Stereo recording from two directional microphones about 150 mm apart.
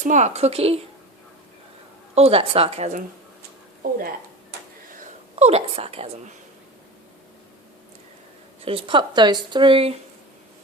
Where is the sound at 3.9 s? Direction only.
70° right (ahead or behind).